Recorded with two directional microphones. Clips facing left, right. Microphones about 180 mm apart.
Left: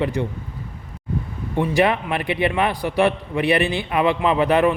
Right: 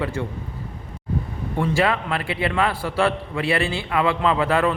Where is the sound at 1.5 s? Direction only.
20° left (ahead or behind).